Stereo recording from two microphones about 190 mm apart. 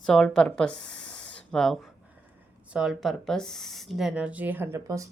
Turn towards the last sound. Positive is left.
turn(degrees=-15)  # may be behind; listen again after turning